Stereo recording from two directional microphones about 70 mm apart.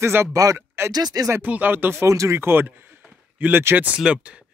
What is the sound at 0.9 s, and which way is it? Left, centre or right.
Speech, right.